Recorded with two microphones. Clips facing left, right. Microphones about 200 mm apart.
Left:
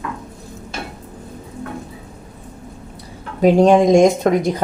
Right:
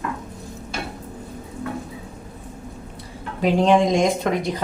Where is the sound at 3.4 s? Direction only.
45° left (ahead or behind).